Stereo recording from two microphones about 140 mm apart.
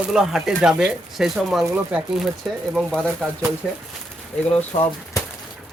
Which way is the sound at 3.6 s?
10° left (ahead or behind).